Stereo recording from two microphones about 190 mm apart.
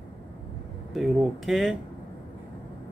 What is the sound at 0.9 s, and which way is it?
Speech, centre (ahead or behind).